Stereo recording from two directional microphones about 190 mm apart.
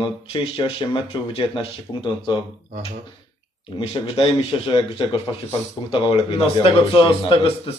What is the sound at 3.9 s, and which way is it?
A man's voice, 25° left (ahead or behind).